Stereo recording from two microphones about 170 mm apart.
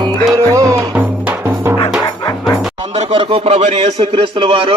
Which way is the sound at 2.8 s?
35° right (ahead or behind).